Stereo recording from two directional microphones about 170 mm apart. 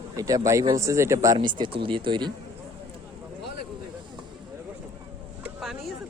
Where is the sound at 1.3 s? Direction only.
30° right (ahead or behind).